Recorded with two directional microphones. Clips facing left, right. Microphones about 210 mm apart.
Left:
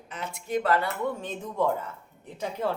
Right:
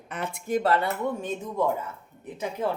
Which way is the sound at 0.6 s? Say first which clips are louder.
Right 1 dB; 30° right (ahead or behind).